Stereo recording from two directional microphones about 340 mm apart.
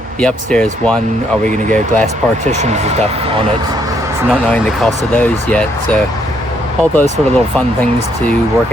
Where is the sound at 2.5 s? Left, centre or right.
Centre.